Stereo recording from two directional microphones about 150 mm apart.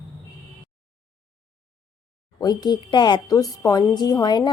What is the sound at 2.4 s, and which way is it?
A woman's voice, 25° left (ahead or behind).